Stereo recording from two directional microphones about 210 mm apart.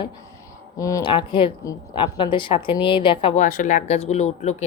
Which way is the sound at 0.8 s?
15° left (ahead or behind).